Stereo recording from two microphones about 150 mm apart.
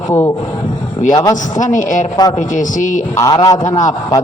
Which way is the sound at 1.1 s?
25° left (ahead or behind).